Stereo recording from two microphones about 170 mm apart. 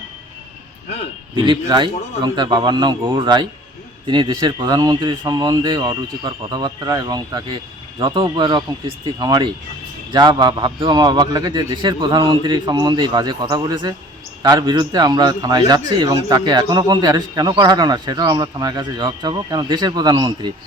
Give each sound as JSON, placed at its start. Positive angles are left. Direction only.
{"t": 1.4, "sound": "a man's voice", "side_deg": -25}